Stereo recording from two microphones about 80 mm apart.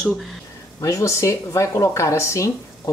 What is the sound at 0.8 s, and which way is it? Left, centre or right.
A woman's voice, left.